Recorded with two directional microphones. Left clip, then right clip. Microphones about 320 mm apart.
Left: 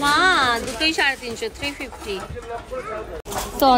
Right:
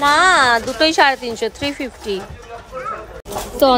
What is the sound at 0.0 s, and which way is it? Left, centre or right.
A woman's voice, centre.